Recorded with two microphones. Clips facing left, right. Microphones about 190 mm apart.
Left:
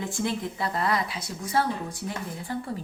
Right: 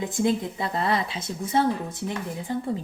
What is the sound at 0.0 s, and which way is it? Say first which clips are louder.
Speech: right 5 dB; 20° right (ahead or behind).